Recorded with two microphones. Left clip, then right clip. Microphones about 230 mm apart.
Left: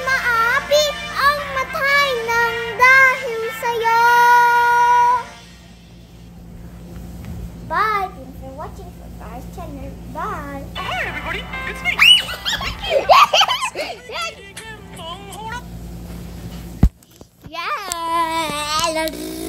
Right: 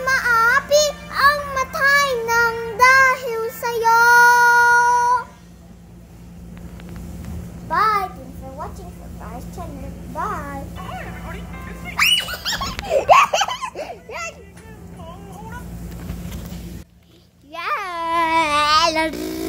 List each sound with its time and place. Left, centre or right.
0.0 s music: centre
1.5 s child singing: centre
2.5 s child singing: left
2.8 s child singing: centre
7.6 s a sound: centre
10.1 s a sound: centre
10.7 s music: left
12.0 s a sound: centre
17.5 s child singing: centre